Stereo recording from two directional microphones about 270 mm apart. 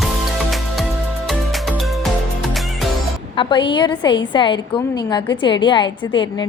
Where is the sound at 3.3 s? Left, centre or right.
Centre.